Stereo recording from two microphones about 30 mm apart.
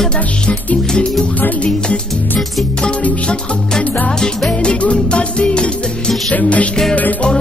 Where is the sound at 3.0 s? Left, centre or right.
Left.